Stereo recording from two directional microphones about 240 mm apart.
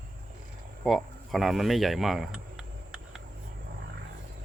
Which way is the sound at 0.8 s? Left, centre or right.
Centre.